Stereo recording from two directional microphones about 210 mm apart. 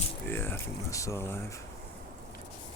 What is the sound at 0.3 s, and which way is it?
Speech, 10° left (ahead or behind).